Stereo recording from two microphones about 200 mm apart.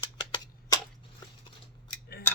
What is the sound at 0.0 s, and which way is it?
Tick-tock, 25° left (ahead or behind).